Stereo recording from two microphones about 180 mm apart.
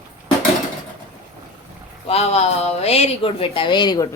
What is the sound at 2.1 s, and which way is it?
A woman's voice, 35° left (ahead or behind).